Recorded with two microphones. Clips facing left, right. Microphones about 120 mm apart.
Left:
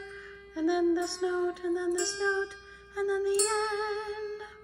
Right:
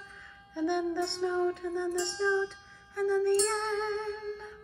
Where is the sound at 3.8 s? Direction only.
5° left (ahead or behind).